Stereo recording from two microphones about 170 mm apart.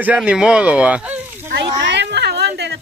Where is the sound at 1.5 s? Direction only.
90° right.